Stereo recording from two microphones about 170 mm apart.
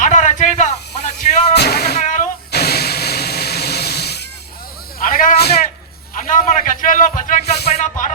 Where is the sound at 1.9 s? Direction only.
45° left (ahead or behind).